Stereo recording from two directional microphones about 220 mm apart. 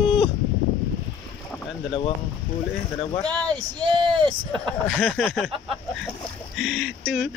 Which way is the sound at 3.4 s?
20° right (ahead or behind).